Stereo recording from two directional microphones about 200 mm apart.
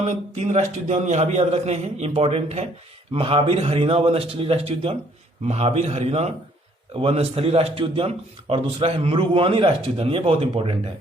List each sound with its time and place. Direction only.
0.0 s a man's voice: 35° right (ahead or behind)